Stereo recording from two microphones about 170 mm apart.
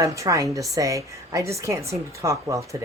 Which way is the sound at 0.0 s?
20° right (ahead or behind).